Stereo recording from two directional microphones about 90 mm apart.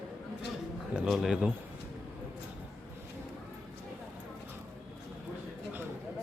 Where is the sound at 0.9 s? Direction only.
5° right (ahead or behind).